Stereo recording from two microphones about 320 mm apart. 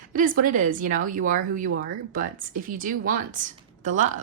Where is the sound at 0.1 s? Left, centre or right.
Right.